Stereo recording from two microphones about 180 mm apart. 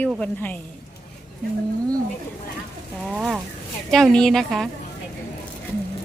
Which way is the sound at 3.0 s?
Centre (ahead or behind).